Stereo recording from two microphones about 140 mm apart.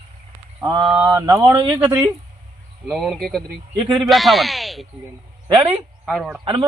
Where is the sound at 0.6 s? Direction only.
30° right (ahead or behind).